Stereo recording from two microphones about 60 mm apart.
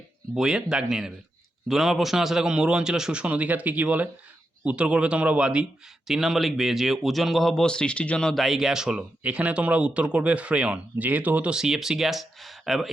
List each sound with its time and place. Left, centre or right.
0.3 s a man's voice: centre
6.1 s speech: centre
7.6 s speech: centre
8.4 s a man's voice: centre
9.2 s speech: right
11.5 s speech: centre